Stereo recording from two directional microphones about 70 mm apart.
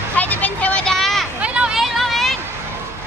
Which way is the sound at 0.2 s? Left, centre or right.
Left.